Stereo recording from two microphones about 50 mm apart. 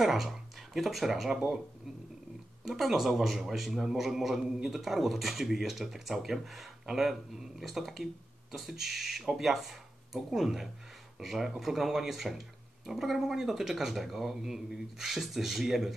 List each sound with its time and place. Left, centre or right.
0.0 s speech: centre
2.6 s speech: centre